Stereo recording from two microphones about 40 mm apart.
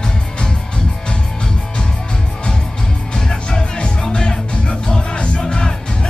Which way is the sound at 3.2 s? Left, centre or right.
Centre.